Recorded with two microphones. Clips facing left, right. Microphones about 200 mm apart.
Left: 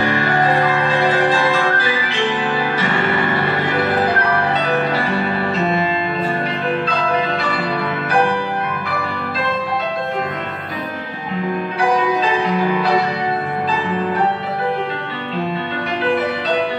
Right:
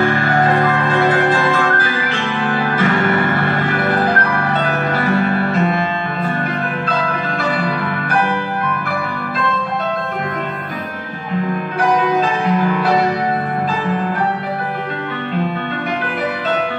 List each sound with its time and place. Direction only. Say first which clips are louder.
0.0 s music: right 2 dB; 50° right (ahead or behind)